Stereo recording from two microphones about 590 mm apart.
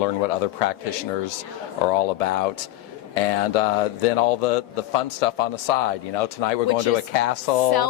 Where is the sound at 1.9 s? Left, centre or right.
Left.